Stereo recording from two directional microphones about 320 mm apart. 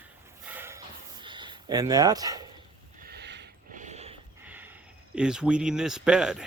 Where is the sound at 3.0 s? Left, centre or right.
Right.